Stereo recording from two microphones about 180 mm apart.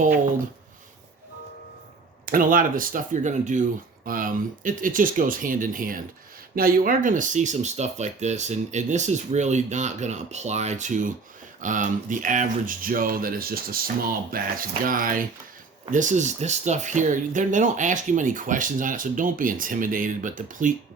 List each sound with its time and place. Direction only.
2.2 s speech: 50° right (ahead or behind)